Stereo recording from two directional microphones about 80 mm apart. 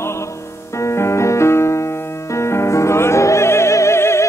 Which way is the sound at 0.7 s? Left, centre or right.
Left.